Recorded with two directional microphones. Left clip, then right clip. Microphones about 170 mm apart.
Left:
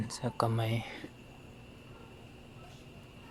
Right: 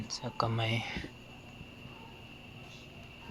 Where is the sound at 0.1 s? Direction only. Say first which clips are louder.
Left 1 dB; 45° left (ahead or behind); by 1.1 s 20° left (ahead or behind).